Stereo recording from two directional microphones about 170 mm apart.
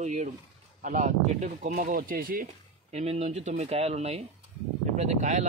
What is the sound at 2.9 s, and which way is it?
Speech, 40° right (ahead or behind).